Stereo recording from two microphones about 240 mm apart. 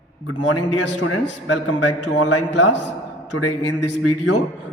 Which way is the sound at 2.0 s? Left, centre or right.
Left.